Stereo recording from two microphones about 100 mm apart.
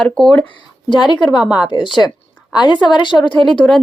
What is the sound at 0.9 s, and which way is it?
A woman's voice, 50° left (ahead or behind).